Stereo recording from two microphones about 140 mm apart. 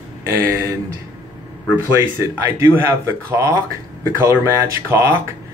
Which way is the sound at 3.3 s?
20° right (ahead or behind).